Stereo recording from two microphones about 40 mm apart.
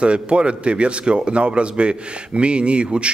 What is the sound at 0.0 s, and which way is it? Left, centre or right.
Speech, right.